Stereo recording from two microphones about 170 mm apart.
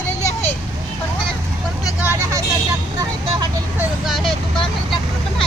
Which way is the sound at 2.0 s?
10° right (ahead or behind).